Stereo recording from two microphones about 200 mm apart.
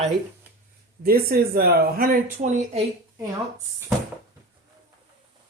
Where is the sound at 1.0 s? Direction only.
50° right (ahead or behind).